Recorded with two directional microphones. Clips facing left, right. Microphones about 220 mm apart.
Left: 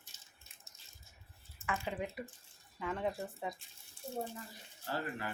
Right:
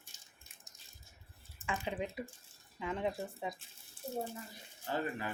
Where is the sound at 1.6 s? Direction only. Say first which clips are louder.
Right 1 dB; 15° right (ahead or behind).